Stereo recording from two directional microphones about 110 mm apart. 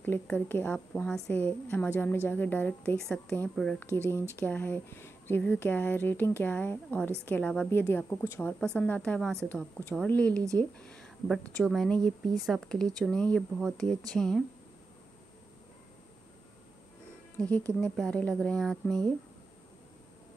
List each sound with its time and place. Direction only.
0.0 s speech: 20° left (ahead or behind)
0.7 s speech: 5° left (ahead or behind)
1.3 s speech: 15° left (ahead or behind)
17.4 s speech: 10° left (ahead or behind)